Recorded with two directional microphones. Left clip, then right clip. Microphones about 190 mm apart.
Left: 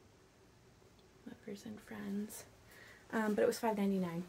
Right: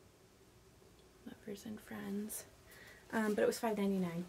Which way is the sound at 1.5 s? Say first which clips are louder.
Right 1 dB; 20° right (ahead or behind).